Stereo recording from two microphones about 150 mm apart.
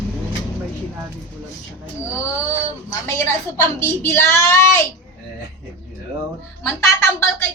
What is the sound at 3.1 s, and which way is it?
Speech, 15° left (ahead or behind).